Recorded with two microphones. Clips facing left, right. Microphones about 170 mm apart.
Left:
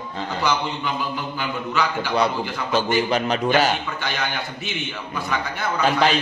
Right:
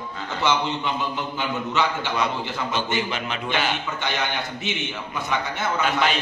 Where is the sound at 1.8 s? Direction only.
25° right (ahead or behind).